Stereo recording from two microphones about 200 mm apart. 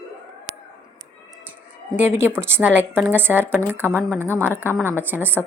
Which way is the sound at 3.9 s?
5° left (ahead or behind).